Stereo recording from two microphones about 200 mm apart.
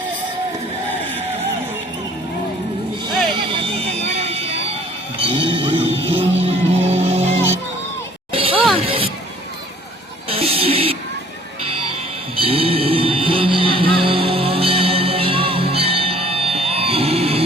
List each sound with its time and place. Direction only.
3.6 s vehicle: 35° right (ahead or behind)
5.2 s music: 25° right (ahead or behind)
8.8 s vehicle: 30° right (ahead or behind)
10.2 s music: 30° right (ahead or behind)
12.4 s vehicle: 30° right (ahead or behind)